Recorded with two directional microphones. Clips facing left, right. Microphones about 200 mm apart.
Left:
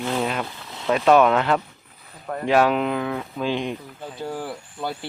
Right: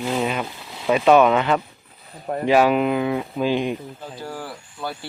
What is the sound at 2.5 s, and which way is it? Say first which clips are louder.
Speech: right 2 dB; 5° right (ahead or behind).